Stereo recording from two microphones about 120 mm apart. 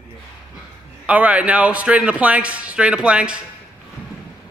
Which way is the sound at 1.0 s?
10° right (ahead or behind).